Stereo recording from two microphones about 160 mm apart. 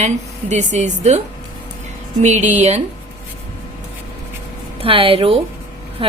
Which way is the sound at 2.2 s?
45° right (ahead or behind).